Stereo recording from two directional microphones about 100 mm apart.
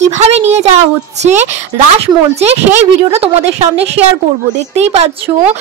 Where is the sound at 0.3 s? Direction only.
90° right.